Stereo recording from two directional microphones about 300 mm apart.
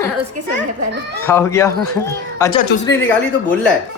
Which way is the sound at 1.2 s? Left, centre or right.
Centre.